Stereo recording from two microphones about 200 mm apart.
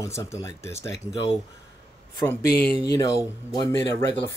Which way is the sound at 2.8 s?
20° left (ahead or behind).